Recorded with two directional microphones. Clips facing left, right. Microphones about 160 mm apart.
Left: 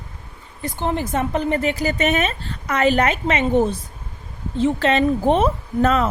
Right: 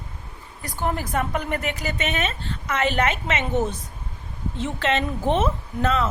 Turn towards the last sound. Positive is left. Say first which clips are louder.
# left 5 dB
turn(degrees=40)  # may be behind; listen again after turning